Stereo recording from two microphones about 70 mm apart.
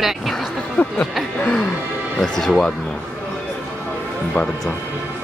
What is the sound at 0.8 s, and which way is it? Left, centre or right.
Speech, left.